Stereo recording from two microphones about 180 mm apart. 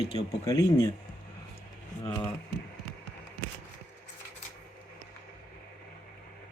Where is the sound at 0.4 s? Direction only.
20° left (ahead or behind).